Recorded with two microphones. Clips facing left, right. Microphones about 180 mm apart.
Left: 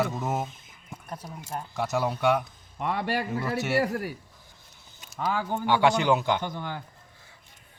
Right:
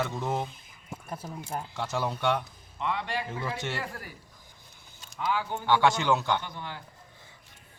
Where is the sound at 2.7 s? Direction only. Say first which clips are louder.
Left 3 dB; 45° left (ahead or behind).